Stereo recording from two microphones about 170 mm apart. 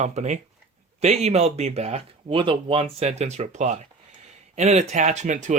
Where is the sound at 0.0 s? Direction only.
45° right (ahead or behind).